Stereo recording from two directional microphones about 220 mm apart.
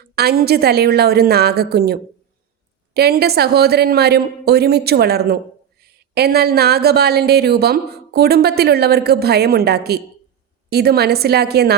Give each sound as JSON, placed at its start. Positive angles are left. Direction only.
{"t": 0.0, "sound": "speech", "side_deg": -45}